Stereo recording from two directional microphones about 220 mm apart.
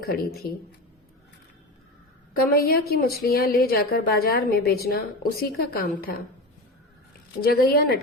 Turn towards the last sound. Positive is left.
turn(degrees=45)  # may be behind; listen again after turning